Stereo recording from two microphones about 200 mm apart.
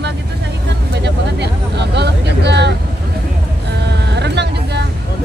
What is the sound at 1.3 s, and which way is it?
Speech, 60° right (ahead or behind).